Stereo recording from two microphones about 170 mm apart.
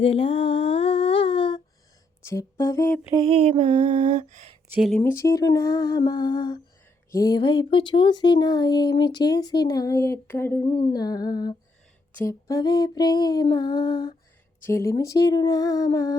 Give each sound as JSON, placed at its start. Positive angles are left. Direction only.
{"t": 0.0, "sound": "humming", "side_deg": 35}
{"t": 2.2, "sound": "humming", "side_deg": 15}
{"t": 3.2, "sound": "mantra", "side_deg": -35}
{"t": 3.8, "sound": "a sound", "side_deg": -45}
{"t": 4.7, "sound": "speech", "side_deg": 0}
{"t": 4.9, "sound": "speech", "side_deg": 15}
{"t": 10.7, "sound": "speech", "side_deg": 30}